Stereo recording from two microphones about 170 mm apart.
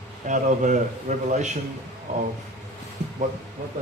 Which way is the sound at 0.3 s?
45° right (ahead or behind).